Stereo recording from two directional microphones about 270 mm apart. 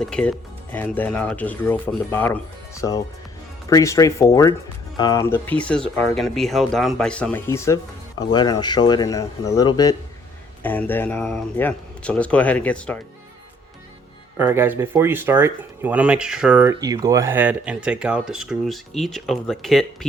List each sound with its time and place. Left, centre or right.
0.0 s speech: centre
14.3 s speech: centre